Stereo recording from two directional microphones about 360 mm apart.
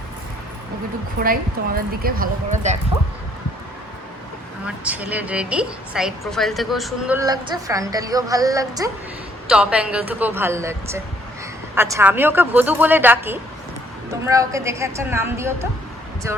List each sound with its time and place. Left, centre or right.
1.2 s speech: right
4.6 s a woman's voice: centre